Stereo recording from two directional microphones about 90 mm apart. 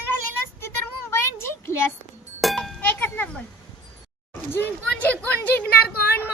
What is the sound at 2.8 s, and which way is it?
Livestock, 15° left (ahead or behind).